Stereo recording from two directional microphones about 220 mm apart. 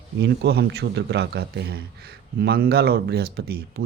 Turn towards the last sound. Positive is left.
turn(degrees=-45)  # may be behind; listen again after turning